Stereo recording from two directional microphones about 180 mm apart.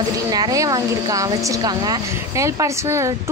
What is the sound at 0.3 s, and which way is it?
Speech, 20° right (ahead or behind).